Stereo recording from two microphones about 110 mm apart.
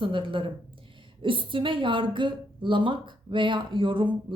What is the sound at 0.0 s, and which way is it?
A woman's voice, 50° right (ahead or behind).